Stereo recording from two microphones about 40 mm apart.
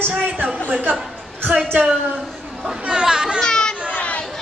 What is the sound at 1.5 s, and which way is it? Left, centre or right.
Speech, right.